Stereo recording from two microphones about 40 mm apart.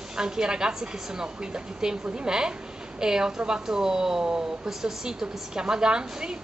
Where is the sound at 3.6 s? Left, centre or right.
Centre.